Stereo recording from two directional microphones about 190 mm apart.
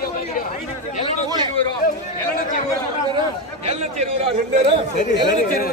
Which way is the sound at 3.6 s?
35° right (ahead or behind).